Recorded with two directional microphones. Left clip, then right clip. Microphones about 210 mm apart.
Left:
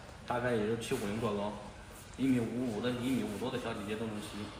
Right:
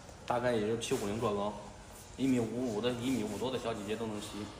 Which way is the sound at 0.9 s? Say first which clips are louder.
Right 2 dB; 40° right (ahead or behind).